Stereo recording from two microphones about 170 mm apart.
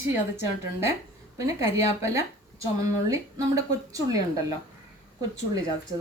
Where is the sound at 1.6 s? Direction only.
15° right (ahead or behind).